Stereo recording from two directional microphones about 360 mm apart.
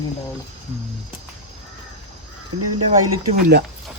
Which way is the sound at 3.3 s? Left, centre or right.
Right.